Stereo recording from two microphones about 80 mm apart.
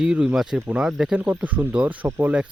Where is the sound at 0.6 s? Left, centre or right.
Centre.